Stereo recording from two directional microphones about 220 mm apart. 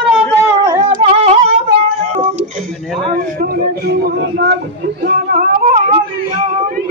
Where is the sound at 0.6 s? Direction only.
20° right (ahead or behind); by 5.8 s 35° right (ahead or behind).